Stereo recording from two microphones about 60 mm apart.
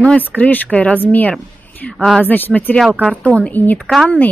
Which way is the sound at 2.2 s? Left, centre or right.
Left.